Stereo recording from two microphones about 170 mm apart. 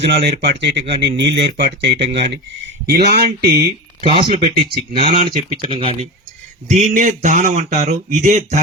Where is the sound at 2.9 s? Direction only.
70° right (ahead or behind).